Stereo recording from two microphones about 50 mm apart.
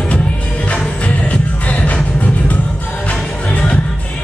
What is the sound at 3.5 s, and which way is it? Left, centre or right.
Music, left.